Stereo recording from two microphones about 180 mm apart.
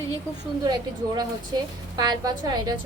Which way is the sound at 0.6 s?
20° right (ahead or behind).